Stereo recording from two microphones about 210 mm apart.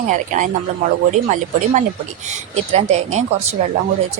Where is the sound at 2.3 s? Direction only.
30° right (ahead or behind).